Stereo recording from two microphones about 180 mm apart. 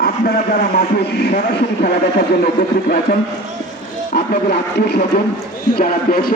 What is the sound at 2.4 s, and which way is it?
Speech, 55° left (ahead or behind).